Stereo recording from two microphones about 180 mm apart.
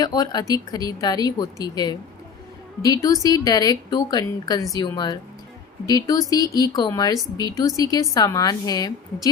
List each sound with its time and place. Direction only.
0.0 s speech: 20° left (ahead or behind)